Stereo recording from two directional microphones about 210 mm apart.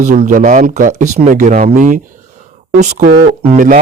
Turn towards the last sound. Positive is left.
turn(degrees=-35)  # may be behind; listen again after turning